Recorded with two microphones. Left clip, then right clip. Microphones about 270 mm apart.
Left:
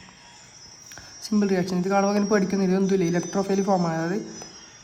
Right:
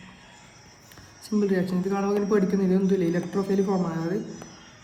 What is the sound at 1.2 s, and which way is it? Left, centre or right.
Speech, left.